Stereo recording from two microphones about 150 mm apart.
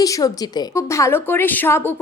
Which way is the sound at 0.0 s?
25° left (ahead or behind).